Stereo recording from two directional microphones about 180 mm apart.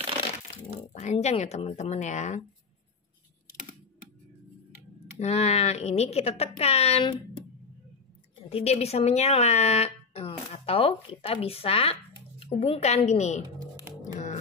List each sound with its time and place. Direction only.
0.9 s speech: 40° left (ahead or behind)
5.2 s speech: 35° left (ahead or behind)
8.5 s speech: 35° left (ahead or behind)
14.0 s music: 45° left (ahead or behind)